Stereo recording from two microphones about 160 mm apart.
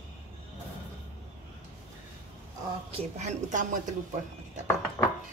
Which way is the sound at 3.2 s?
50° right (ahead or behind).